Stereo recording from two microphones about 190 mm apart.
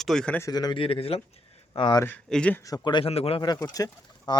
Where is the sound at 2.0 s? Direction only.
5° left (ahead or behind).